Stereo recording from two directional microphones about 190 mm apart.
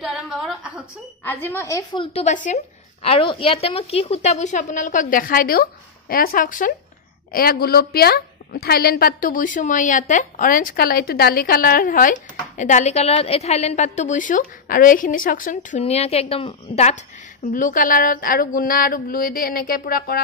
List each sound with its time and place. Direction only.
0.0 s a sound: centre (ahead or behind)
1.2 s a woman's voice: 10° left (ahead or behind)
2.1 s a woman's voice: 40° left (ahead or behind)